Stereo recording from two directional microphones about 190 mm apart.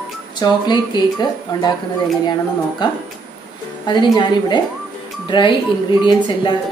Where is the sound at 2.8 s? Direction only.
25° left (ahead or behind).